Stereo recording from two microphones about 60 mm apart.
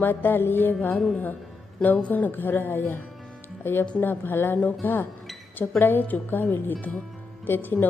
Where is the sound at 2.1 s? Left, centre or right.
Left.